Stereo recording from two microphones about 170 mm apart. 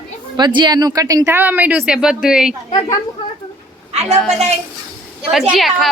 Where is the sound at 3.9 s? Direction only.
40° right (ahead or behind).